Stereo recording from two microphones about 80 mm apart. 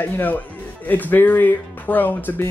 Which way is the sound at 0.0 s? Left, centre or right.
Left.